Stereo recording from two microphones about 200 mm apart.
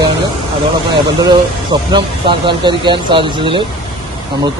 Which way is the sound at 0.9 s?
20° right (ahead or behind).